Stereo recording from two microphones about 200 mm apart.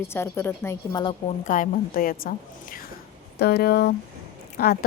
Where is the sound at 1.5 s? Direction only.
40° left (ahead or behind).